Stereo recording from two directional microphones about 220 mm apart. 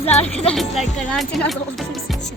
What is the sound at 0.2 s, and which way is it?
Speech, 5° left (ahead or behind).